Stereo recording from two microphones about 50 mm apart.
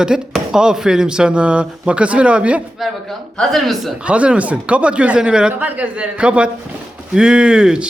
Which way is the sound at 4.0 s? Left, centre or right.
Right.